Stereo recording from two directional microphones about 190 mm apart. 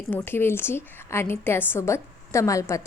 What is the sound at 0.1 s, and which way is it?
A woman's voice, 10° left (ahead or behind).